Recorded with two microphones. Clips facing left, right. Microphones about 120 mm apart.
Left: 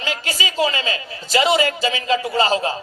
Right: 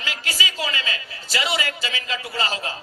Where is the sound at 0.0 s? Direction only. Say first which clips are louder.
Left 4 dB; 25° left (ahead or behind).